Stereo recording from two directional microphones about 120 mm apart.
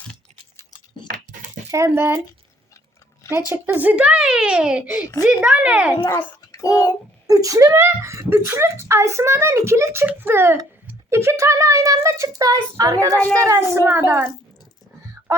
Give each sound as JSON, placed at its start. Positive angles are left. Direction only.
{"t": 1.7, "sound": "speech", "side_deg": -20}
{"t": 3.5, "sound": "speech", "side_deg": -15}
{"t": 6.1, "sound": "a child's voice", "side_deg": 20}
{"t": 7.3, "sound": "speech", "side_deg": -30}
{"t": 15.3, "sound": "a sound", "side_deg": -25}